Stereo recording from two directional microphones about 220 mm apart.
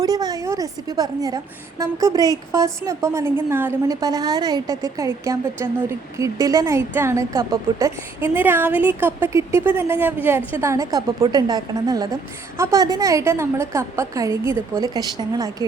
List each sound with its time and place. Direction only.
0.0 s a woman's voice: 15° right (ahead or behind)